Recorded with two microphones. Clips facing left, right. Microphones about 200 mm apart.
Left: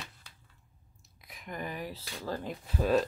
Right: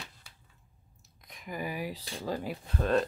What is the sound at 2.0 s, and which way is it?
Speech, 30° right (ahead or behind).